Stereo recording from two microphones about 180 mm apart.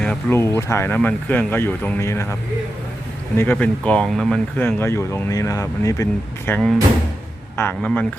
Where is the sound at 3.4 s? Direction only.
10° left (ahead or behind).